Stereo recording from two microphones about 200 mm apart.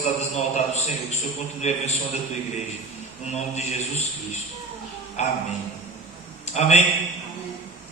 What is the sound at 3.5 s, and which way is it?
A man's voice, 35° left (ahead or behind).